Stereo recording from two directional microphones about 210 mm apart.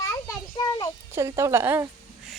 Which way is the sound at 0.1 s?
20° left (ahead or behind).